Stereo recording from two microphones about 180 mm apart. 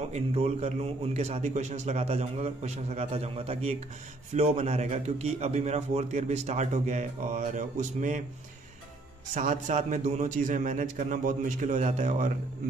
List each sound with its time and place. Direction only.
0.1 s a man's voice: 35° right (ahead or behind)
9.3 s a man's voice: 45° right (ahead or behind)